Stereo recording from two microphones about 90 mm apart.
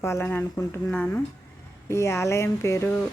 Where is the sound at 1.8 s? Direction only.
30° left (ahead or behind).